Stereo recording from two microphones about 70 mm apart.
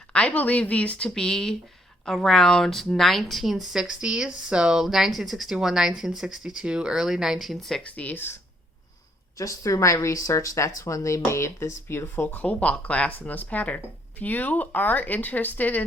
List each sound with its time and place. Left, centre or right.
0.1 s speech: centre
7.9 s speech: left
9.4 s speech: left